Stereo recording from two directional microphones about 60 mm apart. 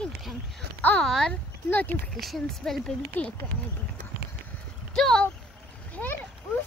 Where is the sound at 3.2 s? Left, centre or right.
Left.